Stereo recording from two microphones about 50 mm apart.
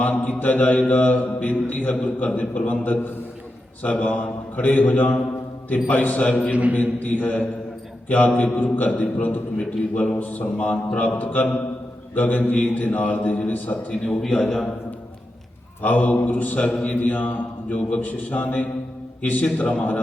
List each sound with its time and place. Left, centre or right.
0.0 s mantra: left
6.5 s a man's voice: right
7.0 s mantra: left
8.0 s a man's voice: left
8.5 s mantra: left
9.6 s a man's voice: left
10.2 s mantra: left
14.4 s a man's voice: centre
15.8 s mantra: left
19.5 s a man's voice: left